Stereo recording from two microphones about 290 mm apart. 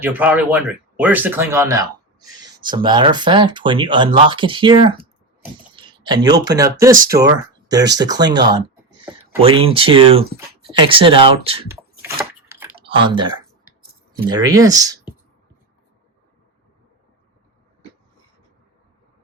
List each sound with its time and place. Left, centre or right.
0.0 s speech: centre
11.7 s a sound: centre
12.8 s speech: centre